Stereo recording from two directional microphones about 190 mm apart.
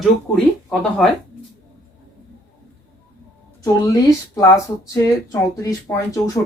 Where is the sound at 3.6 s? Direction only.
15° left (ahead or behind).